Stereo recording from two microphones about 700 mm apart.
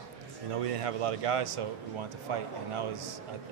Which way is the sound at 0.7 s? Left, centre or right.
Right.